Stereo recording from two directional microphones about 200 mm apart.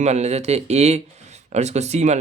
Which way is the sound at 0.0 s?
35° right (ahead or behind).